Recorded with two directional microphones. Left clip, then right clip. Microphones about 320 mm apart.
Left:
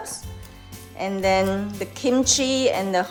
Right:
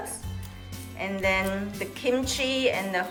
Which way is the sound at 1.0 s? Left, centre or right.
Centre.